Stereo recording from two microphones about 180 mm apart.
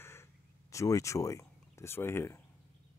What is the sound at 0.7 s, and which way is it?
Speech, 15° left (ahead or behind).